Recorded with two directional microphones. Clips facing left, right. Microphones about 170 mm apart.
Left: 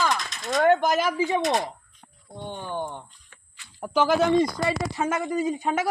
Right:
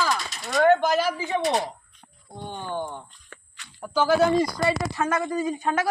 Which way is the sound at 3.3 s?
80° right.